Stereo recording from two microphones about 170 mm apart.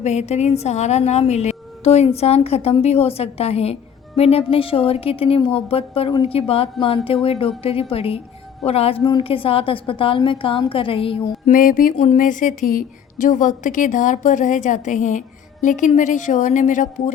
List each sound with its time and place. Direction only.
0.0 s a woman's voice: 40° left (ahead or behind)
11.5 s speech: 55° left (ahead or behind)